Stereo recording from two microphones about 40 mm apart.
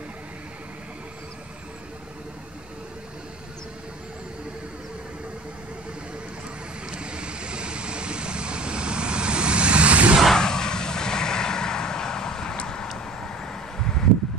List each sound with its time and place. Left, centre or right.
6.9 s vehicle: right
10.3 s vehicle: centre
12.9 s a sound: centre